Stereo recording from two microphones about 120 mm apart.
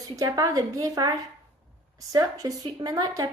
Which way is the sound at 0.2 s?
30° right (ahead or behind).